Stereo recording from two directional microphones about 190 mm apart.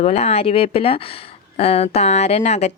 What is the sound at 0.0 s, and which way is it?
Speech, 35° left (ahead or behind).